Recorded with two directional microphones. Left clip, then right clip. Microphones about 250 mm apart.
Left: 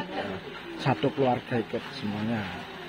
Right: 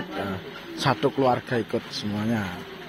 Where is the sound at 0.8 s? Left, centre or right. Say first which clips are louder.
Right 4 dB; centre.